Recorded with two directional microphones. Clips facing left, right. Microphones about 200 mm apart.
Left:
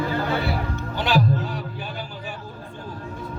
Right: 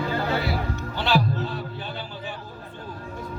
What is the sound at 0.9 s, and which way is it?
Music, 15° left (ahead or behind).